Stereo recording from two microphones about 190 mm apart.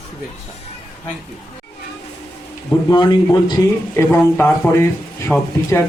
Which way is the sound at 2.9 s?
20° left (ahead or behind).